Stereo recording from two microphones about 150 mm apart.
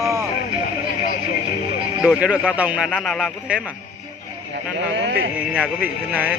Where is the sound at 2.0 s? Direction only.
10° right (ahead or behind).